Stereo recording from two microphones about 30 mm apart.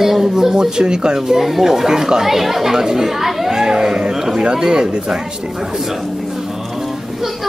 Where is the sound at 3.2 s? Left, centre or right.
Centre.